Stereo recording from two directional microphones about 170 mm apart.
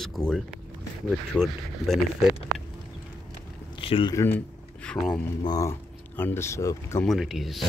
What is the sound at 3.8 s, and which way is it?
Speech, 30° left (ahead or behind).